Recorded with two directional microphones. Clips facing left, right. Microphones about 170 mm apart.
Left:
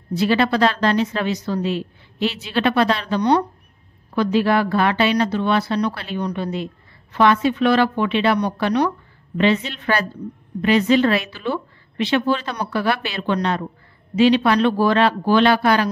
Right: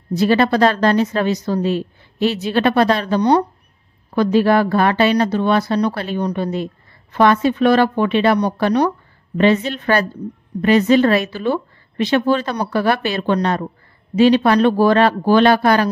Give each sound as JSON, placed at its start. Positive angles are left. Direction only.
{"t": 0.1, "sound": "speech", "side_deg": -45}